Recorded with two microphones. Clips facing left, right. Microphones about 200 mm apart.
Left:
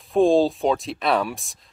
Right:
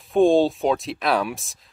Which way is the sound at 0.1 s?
Centre (ahead or behind).